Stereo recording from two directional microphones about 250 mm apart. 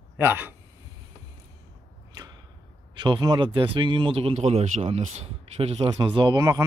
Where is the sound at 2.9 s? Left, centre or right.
Centre.